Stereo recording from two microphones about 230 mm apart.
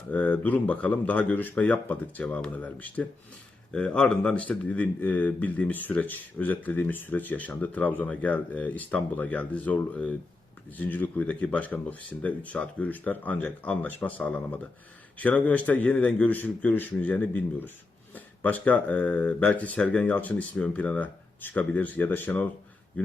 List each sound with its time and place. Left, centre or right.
0.1 s speech: centre